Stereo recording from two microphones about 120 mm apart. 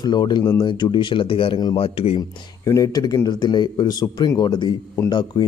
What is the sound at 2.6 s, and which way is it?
A man's voice, 30° left (ahead or behind).